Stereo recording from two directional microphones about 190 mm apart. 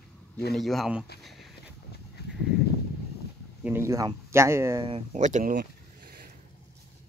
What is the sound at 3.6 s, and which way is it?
A man's voice, 15° right (ahead or behind).